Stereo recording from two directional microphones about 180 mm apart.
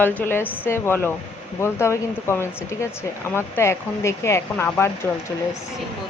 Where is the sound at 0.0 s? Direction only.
10° left (ahead or behind).